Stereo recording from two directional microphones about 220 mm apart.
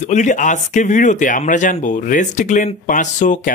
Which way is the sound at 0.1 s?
35° left (ahead or behind).